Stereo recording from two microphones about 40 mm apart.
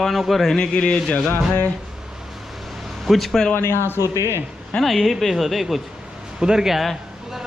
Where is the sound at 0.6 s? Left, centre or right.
Left.